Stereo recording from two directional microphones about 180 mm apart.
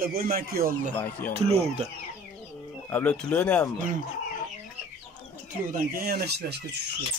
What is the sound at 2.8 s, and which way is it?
Speech, 10° left (ahead or behind).